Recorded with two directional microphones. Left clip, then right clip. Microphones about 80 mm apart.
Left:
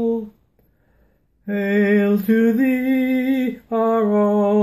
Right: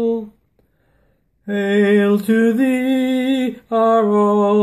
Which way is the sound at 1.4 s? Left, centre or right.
Right.